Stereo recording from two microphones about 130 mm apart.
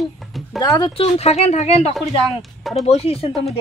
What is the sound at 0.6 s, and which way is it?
Speech, 30° left (ahead or behind).